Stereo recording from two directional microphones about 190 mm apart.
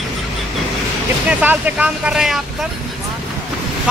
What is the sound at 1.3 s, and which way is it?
Speech, 10° right (ahead or behind).